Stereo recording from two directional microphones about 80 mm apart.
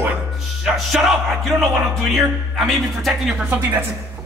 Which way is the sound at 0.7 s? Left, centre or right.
Centre.